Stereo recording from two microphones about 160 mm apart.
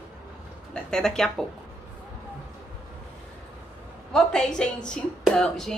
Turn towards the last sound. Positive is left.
turn(degrees=5)  # may be behind; listen again after turning